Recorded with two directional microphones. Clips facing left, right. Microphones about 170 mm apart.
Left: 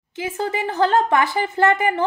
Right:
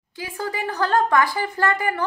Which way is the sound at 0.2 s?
20° left (ahead or behind).